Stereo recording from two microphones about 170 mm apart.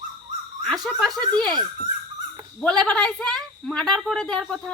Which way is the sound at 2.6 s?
5° left (ahead or behind).